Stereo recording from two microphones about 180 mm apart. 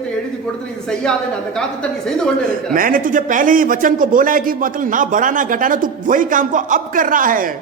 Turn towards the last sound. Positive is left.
turn(degrees=-50)  # may be behind; listen again after turning